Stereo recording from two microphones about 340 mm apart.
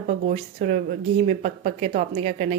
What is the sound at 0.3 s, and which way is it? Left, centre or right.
A woman's voice, right.